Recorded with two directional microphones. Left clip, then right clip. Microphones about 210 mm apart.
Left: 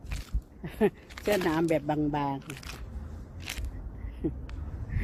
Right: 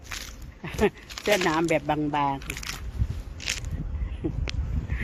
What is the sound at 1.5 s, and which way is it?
Speech, centre (ahead or behind).